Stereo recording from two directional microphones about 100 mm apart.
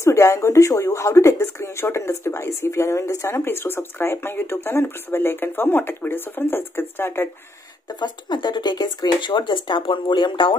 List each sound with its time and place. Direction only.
0.0 s speech: 30° left (ahead or behind)
7.9 s speech: 50° left (ahead or behind)